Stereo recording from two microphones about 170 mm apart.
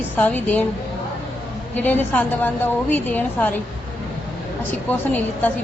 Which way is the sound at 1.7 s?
10° left (ahead or behind).